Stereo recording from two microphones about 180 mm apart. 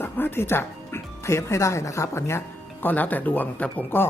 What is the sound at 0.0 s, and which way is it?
Speech, 10° left (ahead or behind).